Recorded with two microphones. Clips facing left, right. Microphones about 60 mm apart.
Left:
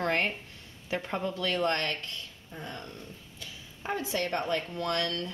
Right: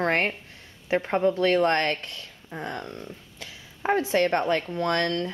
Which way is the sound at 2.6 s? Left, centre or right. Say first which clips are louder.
Right 7 dB; right.